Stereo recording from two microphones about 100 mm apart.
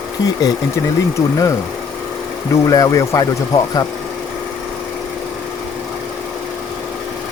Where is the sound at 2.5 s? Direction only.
30° left (ahead or behind).